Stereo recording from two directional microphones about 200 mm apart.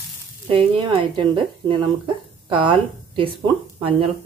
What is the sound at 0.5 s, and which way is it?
Speech, 25° right (ahead or behind).